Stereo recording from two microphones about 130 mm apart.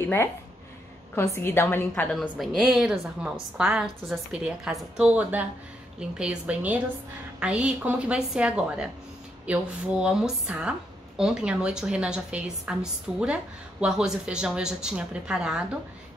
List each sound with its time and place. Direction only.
1.1 s a woman's voice: 20° left (ahead or behind)
2.1 s a woman's voice: centre (ahead or behind)